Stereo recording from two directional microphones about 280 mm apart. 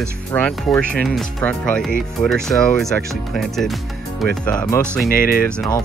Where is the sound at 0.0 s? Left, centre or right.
Centre.